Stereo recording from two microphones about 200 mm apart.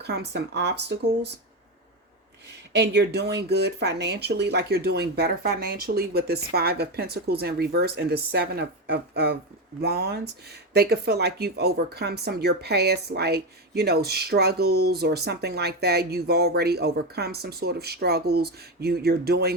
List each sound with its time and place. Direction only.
0.0 s speech: 55° right (ahead or behind)
2.5 s speech: 55° right (ahead or behind)